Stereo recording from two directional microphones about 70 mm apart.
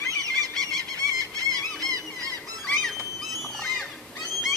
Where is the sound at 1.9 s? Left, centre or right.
Right.